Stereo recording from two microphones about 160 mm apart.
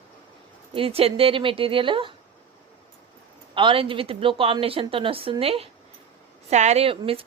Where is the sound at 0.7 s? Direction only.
35° right (ahead or behind).